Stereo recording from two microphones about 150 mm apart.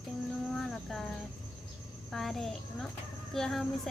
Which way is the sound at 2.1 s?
Centre (ahead or behind).